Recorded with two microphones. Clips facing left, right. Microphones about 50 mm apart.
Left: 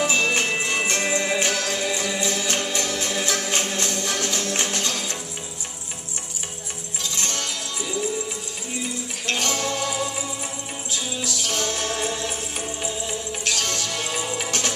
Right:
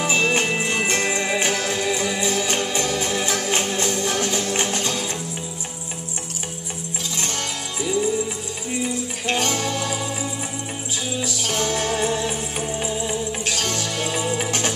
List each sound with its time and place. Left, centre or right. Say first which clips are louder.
0.0 s music: right 1 dB; centre
0.6 s jingle bell: right 2 dB; centre
1.3 s music: right 1 dB; centre
7.2 s music: right 1 dB; right
9.2 s music: right 2 dB; centre
11.2 s music: right 2 dB; right